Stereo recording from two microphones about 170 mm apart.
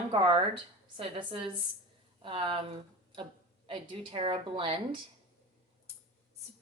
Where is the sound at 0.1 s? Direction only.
30° right (ahead or behind).